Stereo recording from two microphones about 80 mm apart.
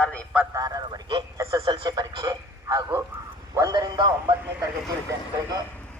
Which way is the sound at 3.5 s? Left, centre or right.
Right.